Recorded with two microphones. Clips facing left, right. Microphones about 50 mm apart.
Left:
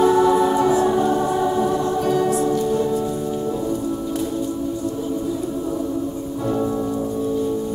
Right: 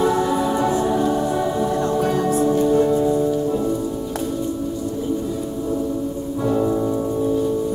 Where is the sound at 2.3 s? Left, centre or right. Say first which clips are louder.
Right 3 dB; right.